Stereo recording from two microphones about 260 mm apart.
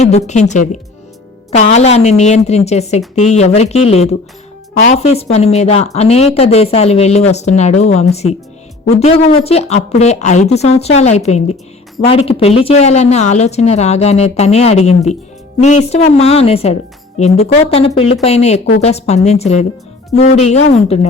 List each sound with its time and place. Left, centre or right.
0.3 s speech: left